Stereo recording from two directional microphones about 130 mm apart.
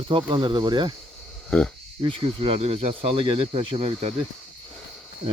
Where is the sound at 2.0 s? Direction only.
45° right (ahead or behind).